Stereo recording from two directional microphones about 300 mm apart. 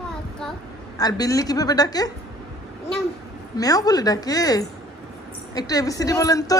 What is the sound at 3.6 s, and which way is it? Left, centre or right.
Speech, centre.